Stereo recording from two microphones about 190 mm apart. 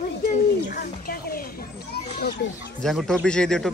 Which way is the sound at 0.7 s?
50° left (ahead or behind).